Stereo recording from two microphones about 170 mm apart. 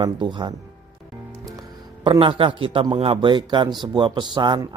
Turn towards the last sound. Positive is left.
turn(degrees=-25)  # may be behind; listen again after turning